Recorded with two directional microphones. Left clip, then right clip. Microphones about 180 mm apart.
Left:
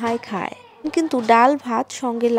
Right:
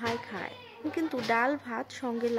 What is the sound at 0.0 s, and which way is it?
Speech, 35° left (ahead or behind).